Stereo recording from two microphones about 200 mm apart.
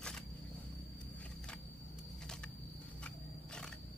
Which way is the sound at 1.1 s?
5° left (ahead or behind).